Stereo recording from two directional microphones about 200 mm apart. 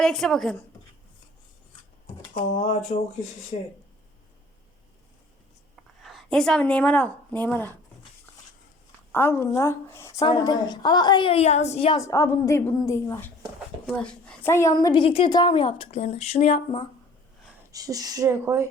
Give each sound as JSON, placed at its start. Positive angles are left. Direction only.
{"t": 0.0, "sound": "speech", "side_deg": 0}
{"t": 2.3, "sound": "speech", "side_deg": 30}
{"t": 6.0, "sound": "a woman's voice", "side_deg": 0}
{"t": 9.1, "sound": "a woman's voice", "side_deg": 10}
{"t": 11.9, "sound": "a woman's voice", "side_deg": 15}
{"t": 17.7, "sound": "speech", "side_deg": -15}